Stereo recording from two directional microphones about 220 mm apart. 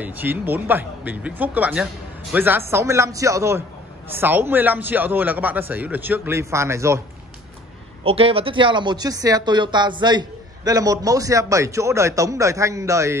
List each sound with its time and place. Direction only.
0.0 s speech: 10° right (ahead or behind)
8.0 s speech: 25° right (ahead or behind)